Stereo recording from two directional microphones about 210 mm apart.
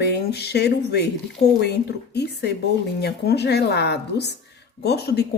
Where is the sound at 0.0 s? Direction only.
50° left (ahead or behind).